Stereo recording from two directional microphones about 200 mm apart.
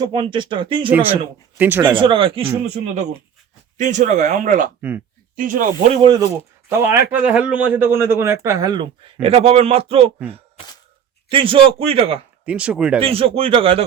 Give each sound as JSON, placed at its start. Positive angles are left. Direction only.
{"t": 0.0, "sound": "speech", "side_deg": -25}
{"t": 0.9, "sound": "a man's voice", "side_deg": -10}
{"t": 1.8, "sound": "speech", "side_deg": -25}
{"t": 4.8, "sound": "speech", "side_deg": -10}
{"t": 5.4, "sound": "speech", "side_deg": -45}
{"t": 6.0, "sound": "speech", "side_deg": -20}
{"t": 6.7, "sound": "a man's voice", "side_deg": -10}
{"t": 11.3, "sound": "speech", "side_deg": -25}
{"t": 12.5, "sound": "speech", "side_deg": -5}
{"t": 13.0, "sound": "speech", "side_deg": -30}